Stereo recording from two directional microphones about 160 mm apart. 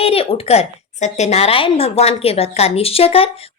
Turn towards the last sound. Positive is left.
turn(degrees=40)  # may be behind; listen again after turning